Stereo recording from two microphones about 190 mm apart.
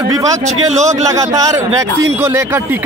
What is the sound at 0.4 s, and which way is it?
Speech, 40° right (ahead or behind).